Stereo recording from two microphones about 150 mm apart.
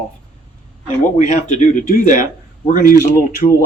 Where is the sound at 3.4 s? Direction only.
40° left (ahead or behind).